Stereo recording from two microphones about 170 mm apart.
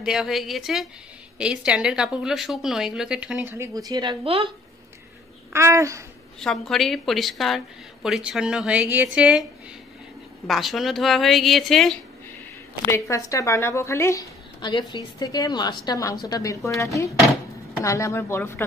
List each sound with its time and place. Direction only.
0.0 s a woman's voice: 5° right (ahead or behind); by 4.5 s 35° right (ahead or behind)
5.5 s speech: 15° right (ahead or behind)
6.4 s a woman's voice: centre (ahead or behind)
10.4 s a woman's voice: centre (ahead or behind)
12.8 s a woman's voice: 15° left (ahead or behind)
14.6 s a woman's voice: 25° left (ahead or behind)